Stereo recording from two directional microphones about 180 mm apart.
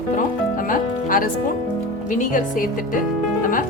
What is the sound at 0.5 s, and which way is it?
Music, 50° left (ahead or behind).